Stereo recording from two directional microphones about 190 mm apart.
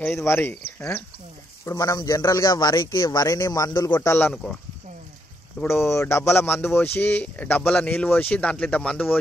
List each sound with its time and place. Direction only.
0.0 s a man's voice: 10° left (ahead or behind)
4.3 s speech: centre (ahead or behind)
5.6 s speech: 15° left (ahead or behind)